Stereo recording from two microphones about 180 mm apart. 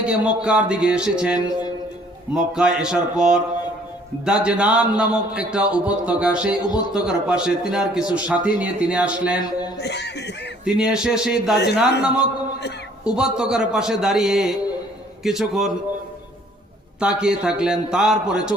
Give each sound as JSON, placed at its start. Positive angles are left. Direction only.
{"t": 0.0, "sound": "speech", "side_deg": -5}
{"t": 9.4, "sound": "speech", "side_deg": 20}
{"t": 9.7, "sound": "speech", "side_deg": 70}
{"t": 10.7, "sound": "speech", "side_deg": -5}
{"t": 17.0, "sound": "speech", "side_deg": -5}